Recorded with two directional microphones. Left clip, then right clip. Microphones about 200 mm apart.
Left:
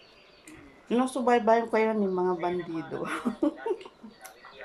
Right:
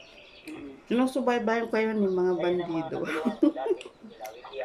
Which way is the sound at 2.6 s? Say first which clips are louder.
Right 4 dB; 40° right (ahead or behind).